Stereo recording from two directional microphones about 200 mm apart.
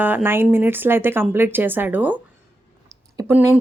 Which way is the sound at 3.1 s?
10° right (ahead or behind).